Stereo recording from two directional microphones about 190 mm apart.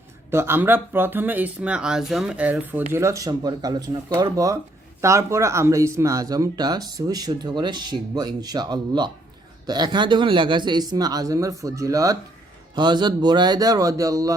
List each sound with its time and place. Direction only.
0.3 s speech: 10° right (ahead or behind)